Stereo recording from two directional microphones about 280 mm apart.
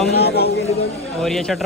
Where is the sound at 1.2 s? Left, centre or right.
Centre.